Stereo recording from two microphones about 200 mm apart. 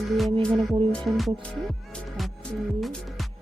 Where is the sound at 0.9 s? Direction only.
Centre (ahead or behind).